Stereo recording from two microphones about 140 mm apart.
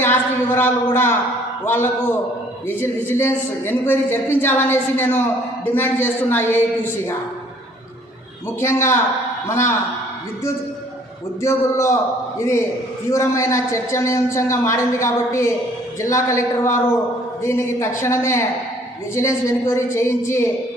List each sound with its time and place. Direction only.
0.0 s a woman's voice: 15° left (ahead or behind)
8.6 s a man's voice: 20° left (ahead or behind)
11.4 s a man's voice: 20° left (ahead or behind)